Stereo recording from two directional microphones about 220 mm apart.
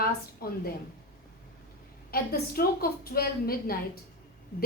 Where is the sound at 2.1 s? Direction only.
45° left (ahead or behind).